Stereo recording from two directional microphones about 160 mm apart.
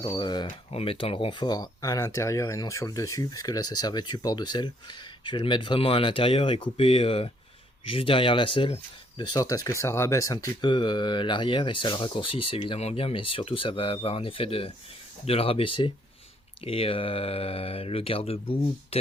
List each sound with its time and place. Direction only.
0.0 s speech: 30° left (ahead or behind)